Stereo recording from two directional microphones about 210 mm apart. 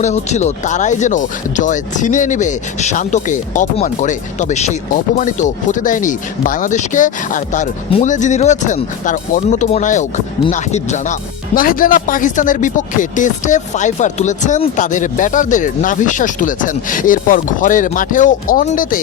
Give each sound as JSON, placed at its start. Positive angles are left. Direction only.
{"t": 0.0, "sound": "speech", "side_deg": 35}